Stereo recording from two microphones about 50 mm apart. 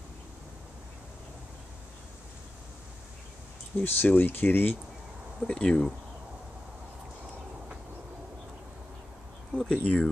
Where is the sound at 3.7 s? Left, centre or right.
Left.